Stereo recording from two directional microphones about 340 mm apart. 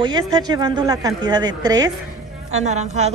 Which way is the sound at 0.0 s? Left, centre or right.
Centre.